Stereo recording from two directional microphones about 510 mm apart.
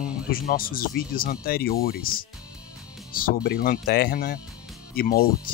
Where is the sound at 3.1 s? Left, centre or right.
Centre.